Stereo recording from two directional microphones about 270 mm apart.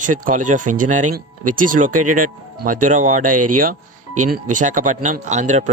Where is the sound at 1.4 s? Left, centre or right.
Right.